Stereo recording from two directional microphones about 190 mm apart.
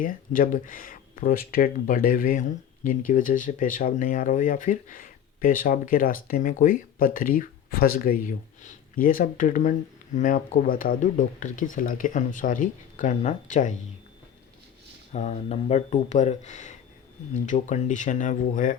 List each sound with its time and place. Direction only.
0.0 s speech: 45° left (ahead or behind)
15.1 s speech: 35° left (ahead or behind)